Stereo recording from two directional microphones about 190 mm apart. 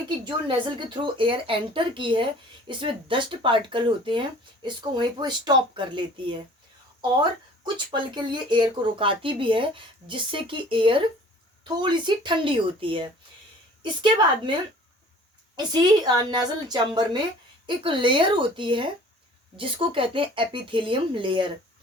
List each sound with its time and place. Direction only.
0.3 s speech: 25° right (ahead or behind)